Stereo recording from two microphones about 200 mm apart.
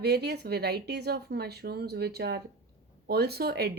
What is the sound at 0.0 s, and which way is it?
Speech, 55° right (ahead or behind).